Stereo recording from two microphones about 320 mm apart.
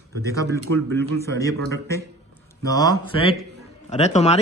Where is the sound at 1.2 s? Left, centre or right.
Centre.